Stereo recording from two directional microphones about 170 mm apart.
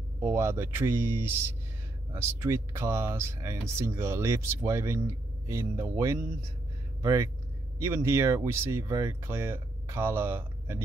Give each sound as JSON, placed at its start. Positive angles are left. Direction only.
{"t": 0.2, "sound": "speech", "side_deg": -15}